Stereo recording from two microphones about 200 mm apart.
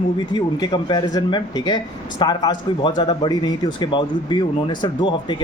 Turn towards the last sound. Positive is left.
turn(degrees=25)  # may be behind; listen again after turning